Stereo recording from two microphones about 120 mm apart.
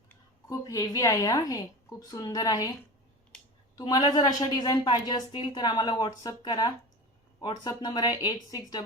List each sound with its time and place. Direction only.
0.4 s a woman's voice: 30° left (ahead or behind)
3.3 s a sound: 5° left (ahead or behind)
3.8 s a woman's voice: 35° left (ahead or behind)